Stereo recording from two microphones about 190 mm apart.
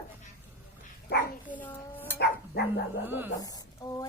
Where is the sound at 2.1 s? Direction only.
55° left (ahead or behind).